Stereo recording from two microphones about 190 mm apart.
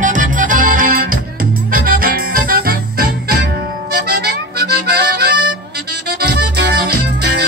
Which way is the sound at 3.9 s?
55° right (ahead or behind).